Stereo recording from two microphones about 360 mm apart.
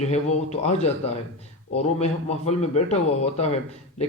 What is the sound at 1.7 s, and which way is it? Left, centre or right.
A man's voice, centre.